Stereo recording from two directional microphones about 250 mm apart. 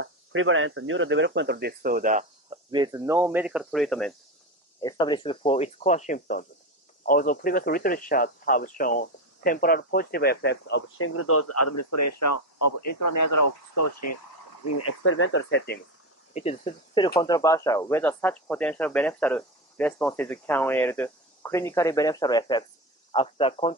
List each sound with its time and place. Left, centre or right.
0.0 s speech: right
2.7 s speech: centre
4.7 s speech: centre; by 11.1 s left
11.1 s speech: left
13.7 s speech: left
14.8 s speech: left
16.3 s speech: left